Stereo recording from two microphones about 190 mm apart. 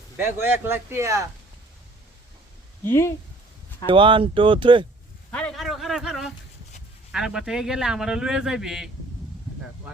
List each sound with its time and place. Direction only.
0.2 s speech: 10° right (ahead or behind)
2.8 s speech: 15° left (ahead or behind)
3.8 s speech: 25° right (ahead or behind)
5.3 s a sound: 5° left (ahead or behind)
7.1 s speech: 5° right (ahead or behind)